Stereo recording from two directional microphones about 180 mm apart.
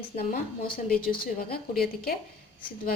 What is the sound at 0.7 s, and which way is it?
A woman's voice, 50° left (ahead or behind).